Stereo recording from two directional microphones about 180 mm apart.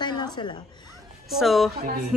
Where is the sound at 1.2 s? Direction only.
Centre (ahead or behind).